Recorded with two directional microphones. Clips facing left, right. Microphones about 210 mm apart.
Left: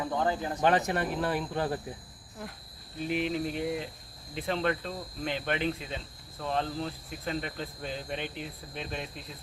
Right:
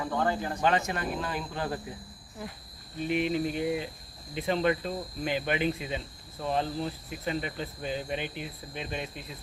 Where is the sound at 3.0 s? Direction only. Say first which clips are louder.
Right 2 dB; centre (ahead or behind).